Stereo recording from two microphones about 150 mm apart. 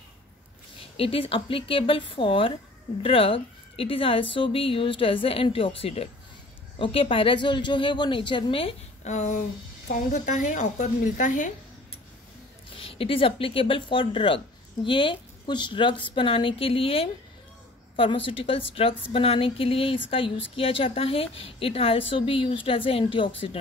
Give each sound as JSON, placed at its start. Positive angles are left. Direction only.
{"t": 0.9, "sound": "a woman's voice", "side_deg": 40}
{"t": 12.8, "sound": "a woman's voice", "side_deg": 40}